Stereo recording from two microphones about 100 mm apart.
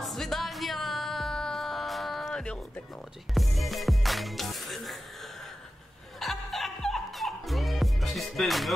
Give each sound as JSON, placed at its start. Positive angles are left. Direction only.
{"t": 0.0, "sound": "music", "side_deg": 0}
{"t": 6.1, "sound": "music", "side_deg": 0}